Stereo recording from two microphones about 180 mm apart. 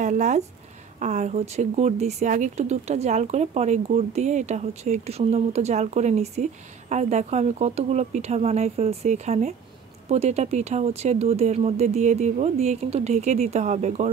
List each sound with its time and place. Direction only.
0.0 s a woman's voice: 45° right (ahead or behind)